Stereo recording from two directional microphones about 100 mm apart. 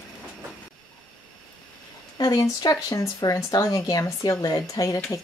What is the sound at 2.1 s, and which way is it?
Speech, 40° left (ahead or behind).